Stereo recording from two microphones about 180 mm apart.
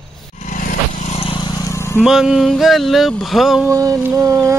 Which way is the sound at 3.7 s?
20° right (ahead or behind).